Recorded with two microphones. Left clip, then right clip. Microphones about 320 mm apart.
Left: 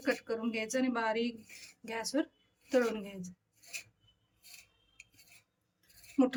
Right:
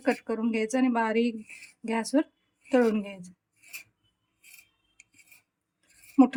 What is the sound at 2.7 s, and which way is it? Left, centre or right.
Speech, centre.